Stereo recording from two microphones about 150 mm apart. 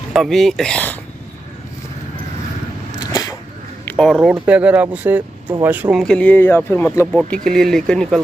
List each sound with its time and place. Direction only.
0.1 s speech: centre (ahead or behind)
3.1 s a sound: 25° left (ahead or behind)
3.8 s speech: 5° left (ahead or behind)
6.0 s speech: 10° left (ahead or behind)
7.4 s speech: 5° left (ahead or behind)